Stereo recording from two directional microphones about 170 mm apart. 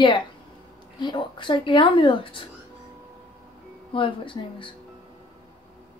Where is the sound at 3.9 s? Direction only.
30° left (ahead or behind).